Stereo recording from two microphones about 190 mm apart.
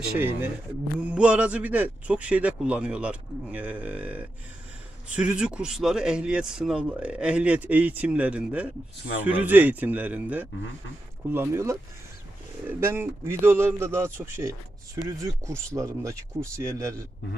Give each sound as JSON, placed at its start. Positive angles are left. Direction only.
{"t": 0.9, "sound": "speech", "side_deg": -5}